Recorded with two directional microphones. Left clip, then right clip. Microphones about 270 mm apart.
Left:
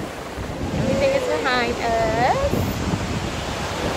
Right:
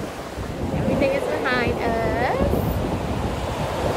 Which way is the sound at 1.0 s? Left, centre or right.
Centre.